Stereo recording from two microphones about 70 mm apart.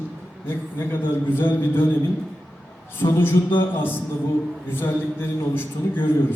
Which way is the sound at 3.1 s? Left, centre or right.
Left.